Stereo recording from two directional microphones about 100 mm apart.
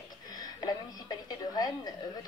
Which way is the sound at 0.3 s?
40° left (ahead or behind).